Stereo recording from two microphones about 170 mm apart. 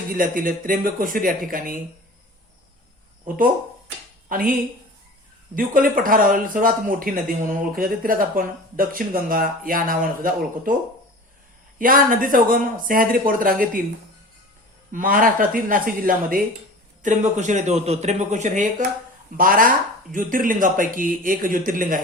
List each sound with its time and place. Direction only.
0.1 s speech: 55° right (ahead or behind)
4.3 s speech: 55° right (ahead or behind)
5.5 s speech: 55° right (ahead or behind)
11.8 s speech: 55° right (ahead or behind)
14.9 s a man's voice: 55° right (ahead or behind)